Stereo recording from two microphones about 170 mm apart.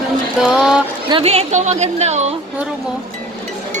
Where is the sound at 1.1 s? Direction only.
35° right (ahead or behind).